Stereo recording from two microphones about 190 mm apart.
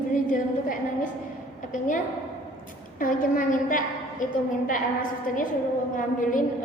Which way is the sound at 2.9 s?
45° left (ahead or behind).